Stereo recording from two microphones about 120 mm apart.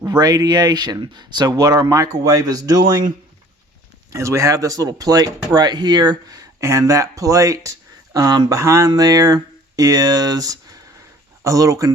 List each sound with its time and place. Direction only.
0.0 s speech: 30° right (ahead or behind)
4.1 s speech: 25° right (ahead or behind)